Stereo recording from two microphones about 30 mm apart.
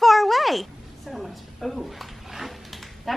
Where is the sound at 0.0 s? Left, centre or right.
Centre.